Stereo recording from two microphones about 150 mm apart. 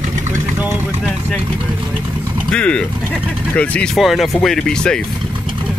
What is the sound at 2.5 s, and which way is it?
Speech, 5° left (ahead or behind).